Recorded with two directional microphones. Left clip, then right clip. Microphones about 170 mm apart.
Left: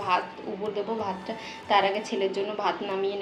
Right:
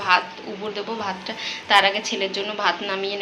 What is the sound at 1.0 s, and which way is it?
A woman's voice, 10° left (ahead or behind).